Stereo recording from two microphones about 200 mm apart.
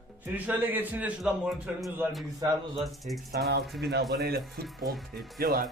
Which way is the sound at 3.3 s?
50° right (ahead or behind).